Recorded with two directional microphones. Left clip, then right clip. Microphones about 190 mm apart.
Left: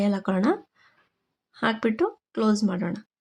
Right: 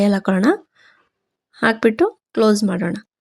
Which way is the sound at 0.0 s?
30° right (ahead or behind).